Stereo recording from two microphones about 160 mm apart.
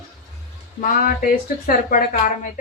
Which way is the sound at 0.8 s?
65° left (ahead or behind).